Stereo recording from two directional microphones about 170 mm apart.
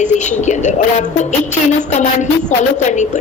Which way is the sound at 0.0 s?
45° left (ahead or behind).